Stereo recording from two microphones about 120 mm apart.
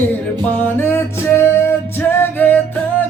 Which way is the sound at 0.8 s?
20° left (ahead or behind).